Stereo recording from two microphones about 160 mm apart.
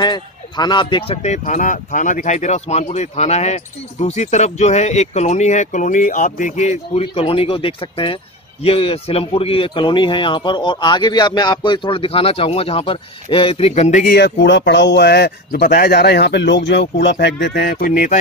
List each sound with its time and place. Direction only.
0.0 s speech: 25° left (ahead or behind); by 14.1 s 45° left (ahead or behind)
14.1 s speech: 90° left; by 18.1 s 55° left (ahead or behind)